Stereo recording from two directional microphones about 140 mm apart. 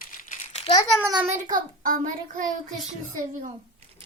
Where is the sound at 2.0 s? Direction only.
70° right (ahead or behind).